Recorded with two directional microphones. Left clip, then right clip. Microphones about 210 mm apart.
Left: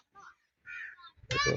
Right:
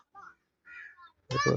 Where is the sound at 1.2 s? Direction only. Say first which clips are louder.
Right 1 dB; 45° right (ahead or behind).